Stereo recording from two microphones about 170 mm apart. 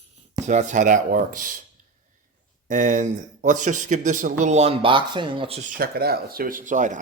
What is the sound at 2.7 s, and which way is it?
Speech, 50° right (ahead or behind).